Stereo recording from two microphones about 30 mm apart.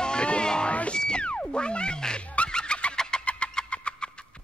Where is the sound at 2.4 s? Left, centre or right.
Left.